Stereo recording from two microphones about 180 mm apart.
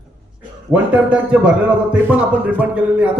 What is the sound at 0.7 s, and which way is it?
A man's voice, 10° right (ahead or behind).